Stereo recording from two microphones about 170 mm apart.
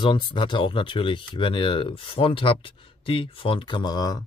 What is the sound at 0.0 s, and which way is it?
Speech, 30° left (ahead or behind).